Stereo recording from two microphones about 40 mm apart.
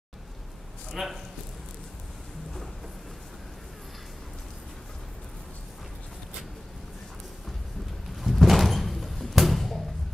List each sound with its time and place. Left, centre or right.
0.9 s a man's voice: centre
8.2 s slam: centre